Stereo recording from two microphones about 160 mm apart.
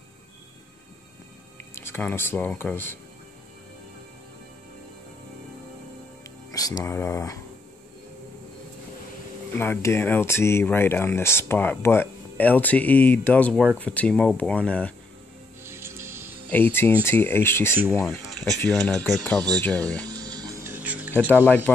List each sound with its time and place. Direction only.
1.6 s speech: 15° left (ahead or behind)
6.5 s speech: 20° left (ahead or behind)
9.6 s speech: 15° left (ahead or behind)
15.6 s music: 15° right (ahead or behind)
16.4 s speech: 10° left (ahead or behind)
20.1 s music: 25° right (ahead or behind)
21.7 s speech: 10° left (ahead or behind)